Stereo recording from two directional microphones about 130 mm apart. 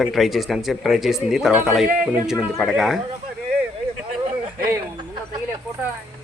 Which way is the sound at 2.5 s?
Centre (ahead or behind).